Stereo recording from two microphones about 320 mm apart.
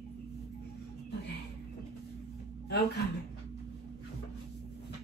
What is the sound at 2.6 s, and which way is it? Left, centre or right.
Speech, left.